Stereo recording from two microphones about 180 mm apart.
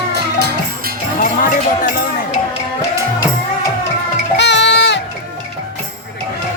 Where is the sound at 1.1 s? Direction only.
45° left (ahead or behind).